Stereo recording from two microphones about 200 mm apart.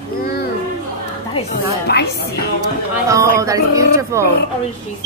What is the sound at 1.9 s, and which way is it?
Speech, 55° left (ahead or behind).